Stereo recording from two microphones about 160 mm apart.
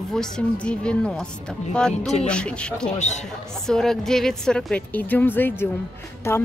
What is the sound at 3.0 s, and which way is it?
Speech, 45° left (ahead or behind).